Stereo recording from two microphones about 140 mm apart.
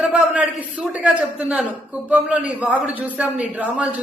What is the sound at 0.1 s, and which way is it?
A man's voice, 10° right (ahead or behind).